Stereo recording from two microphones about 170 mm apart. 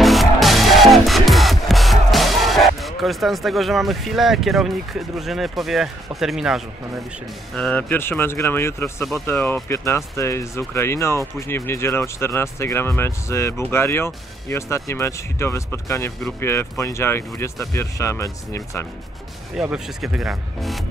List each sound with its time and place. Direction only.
0.0 s music: centre (ahead or behind)
7.5 s speech: 5° left (ahead or behind)
19.6 s speech: 5° right (ahead or behind)